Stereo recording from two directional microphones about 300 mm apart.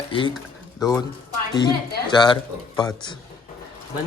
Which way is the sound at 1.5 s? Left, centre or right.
Centre.